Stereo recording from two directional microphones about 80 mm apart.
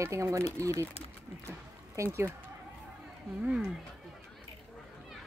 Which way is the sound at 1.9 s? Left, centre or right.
Right.